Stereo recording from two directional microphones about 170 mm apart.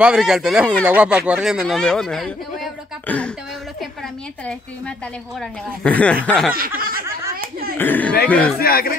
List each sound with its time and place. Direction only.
0.0 s speech: 5° right (ahead or behind)
5.9 s speech: 10° left (ahead or behind)
6.8 s snicker: 60° right (ahead or behind)
7.8 s speech: 10° left (ahead or behind)
8.5 s speech: 60° left (ahead or behind)